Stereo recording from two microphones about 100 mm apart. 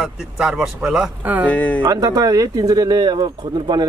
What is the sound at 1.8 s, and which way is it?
Speech, 40° right (ahead or behind).